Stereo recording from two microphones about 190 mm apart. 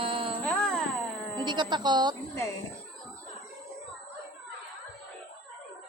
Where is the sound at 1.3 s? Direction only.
25° right (ahead or behind).